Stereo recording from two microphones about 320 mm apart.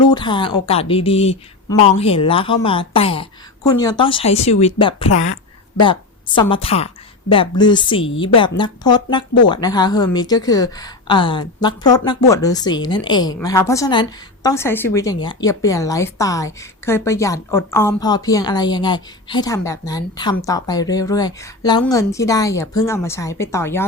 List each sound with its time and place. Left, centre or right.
0.1 s a woman's voice: centre